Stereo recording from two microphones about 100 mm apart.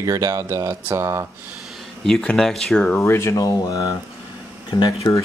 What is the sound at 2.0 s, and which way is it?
Speech, 5° left (ahead or behind).